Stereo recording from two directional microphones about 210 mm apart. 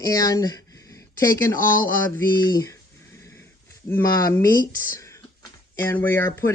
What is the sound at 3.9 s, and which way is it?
Speech, 15° left (ahead or behind).